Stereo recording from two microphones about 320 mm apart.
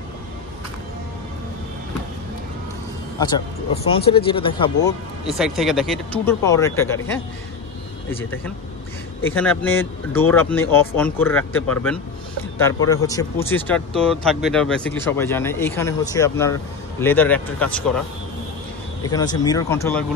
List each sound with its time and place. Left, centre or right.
3.2 s a man's voice: centre
5.4 s speech: centre
9.3 s speech: centre
19.0 s speech: centre